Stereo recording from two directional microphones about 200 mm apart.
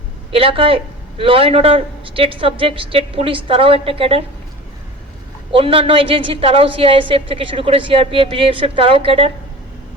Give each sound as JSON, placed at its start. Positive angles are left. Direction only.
{"t": 0.3, "sound": "a woman's voice", "side_deg": -25}
{"t": 5.5, "sound": "a woman's voice", "side_deg": -25}